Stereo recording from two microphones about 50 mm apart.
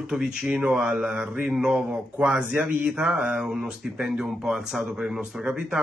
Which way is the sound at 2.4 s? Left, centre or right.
Right.